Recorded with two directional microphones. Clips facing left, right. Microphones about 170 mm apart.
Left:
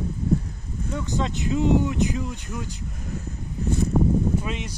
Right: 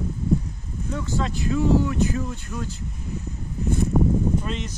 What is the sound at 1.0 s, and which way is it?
Speech, 20° left (ahead or behind).